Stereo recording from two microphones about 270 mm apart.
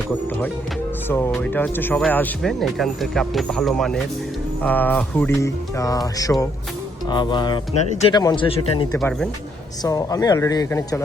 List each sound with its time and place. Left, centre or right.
1.0 s speech: centre
9.0 s speech: centre
9.8 s speech: centre